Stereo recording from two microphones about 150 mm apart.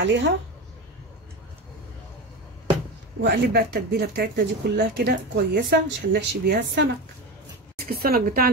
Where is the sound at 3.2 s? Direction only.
90° right.